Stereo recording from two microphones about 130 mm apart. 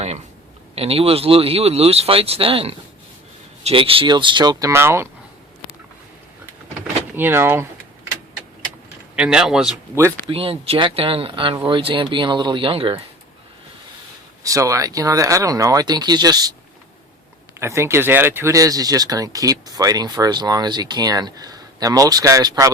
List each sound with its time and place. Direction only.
0.8 s speech: 50° right (ahead or behind)
4.7 s speech: 20° right (ahead or behind)
7.2 s speech: 15° right (ahead or behind)
9.1 s speech: 5° right (ahead or behind)
10.2 s speech: 45° right (ahead or behind)
14.4 s speech: 25° right (ahead or behind)
17.6 s speech: 20° right (ahead or behind)